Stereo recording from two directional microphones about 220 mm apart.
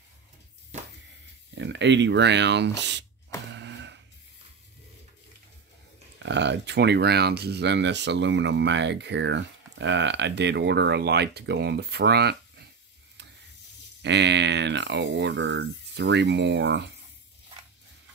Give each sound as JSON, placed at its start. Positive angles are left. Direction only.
{"t": 1.5, "sound": "speech", "side_deg": -55}
{"t": 3.5, "sound": "a sound", "side_deg": -55}
{"t": 6.2, "sound": "speech", "side_deg": -50}
{"t": 14.0, "sound": "speech", "side_deg": -50}